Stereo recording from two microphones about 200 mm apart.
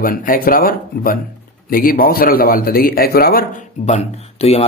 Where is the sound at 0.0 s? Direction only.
45° left (ahead or behind).